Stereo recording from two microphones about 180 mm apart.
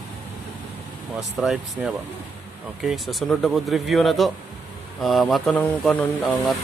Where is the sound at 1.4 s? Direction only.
5° right (ahead or behind).